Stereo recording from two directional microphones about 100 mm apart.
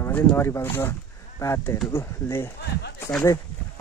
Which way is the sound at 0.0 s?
20° left (ahead or behind).